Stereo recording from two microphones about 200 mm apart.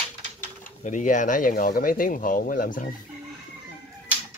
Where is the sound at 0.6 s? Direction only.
40° left (ahead or behind).